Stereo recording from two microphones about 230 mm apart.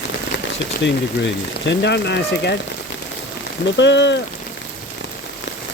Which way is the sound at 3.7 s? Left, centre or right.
Left.